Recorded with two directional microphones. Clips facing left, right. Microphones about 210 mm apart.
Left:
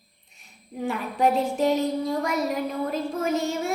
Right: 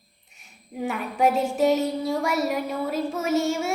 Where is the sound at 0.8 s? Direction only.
Centre (ahead or behind).